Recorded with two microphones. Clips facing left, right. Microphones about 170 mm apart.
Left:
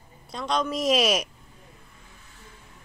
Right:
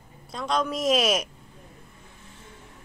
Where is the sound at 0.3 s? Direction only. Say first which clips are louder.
Even; centre (ahead or behind).